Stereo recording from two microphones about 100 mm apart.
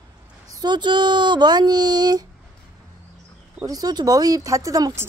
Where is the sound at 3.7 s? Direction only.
40° right (ahead or behind).